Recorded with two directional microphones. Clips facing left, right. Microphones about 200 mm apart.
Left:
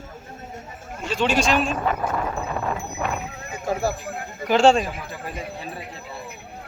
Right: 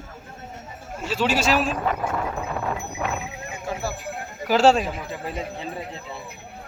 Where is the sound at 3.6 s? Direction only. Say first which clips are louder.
Left 6 dB; 40° left (ahead or behind).